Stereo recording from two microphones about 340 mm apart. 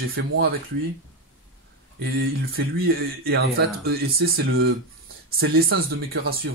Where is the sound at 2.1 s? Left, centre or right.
Right.